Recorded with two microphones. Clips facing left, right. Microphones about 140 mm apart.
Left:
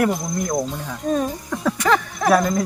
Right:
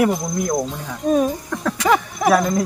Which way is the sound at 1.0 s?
10° right (ahead or behind).